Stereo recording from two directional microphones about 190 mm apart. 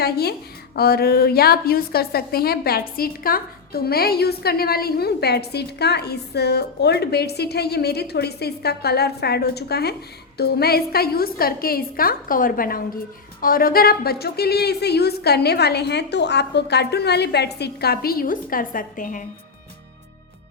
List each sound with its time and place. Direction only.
0.0 s a woman's voice: 55° left (ahead or behind)